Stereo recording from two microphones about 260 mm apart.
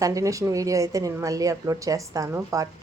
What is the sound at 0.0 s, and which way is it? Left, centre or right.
Speech, centre.